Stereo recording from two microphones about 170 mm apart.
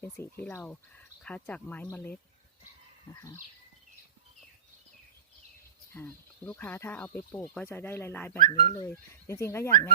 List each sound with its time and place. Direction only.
0.0 s speech: 15° left (ahead or behind)
3.2 s speech: 20° left (ahead or behind)
5.9 s speech: 10° left (ahead or behind)
8.4 s speech: 40° right (ahead or behind)
8.7 s speech: 15° left (ahead or behind)